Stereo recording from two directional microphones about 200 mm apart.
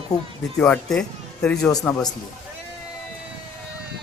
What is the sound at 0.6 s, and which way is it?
A man's voice, 5° left (ahead or behind).